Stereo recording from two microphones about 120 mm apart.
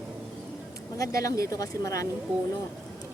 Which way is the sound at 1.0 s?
25° left (ahead or behind).